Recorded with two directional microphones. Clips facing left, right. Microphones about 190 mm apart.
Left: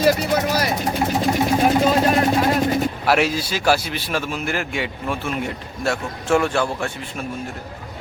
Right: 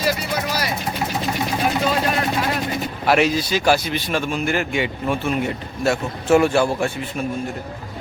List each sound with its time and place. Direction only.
0.0 s speech: 45° left (ahead or behind)
1.3 s a sound: 40° left (ahead or behind)
3.1 s a man's voice: 5° left (ahead or behind)